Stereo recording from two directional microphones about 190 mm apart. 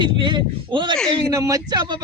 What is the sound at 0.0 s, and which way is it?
Speech, 25° right (ahead or behind).